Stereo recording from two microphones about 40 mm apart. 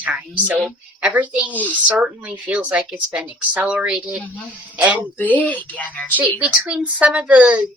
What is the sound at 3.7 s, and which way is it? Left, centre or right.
Speech, right.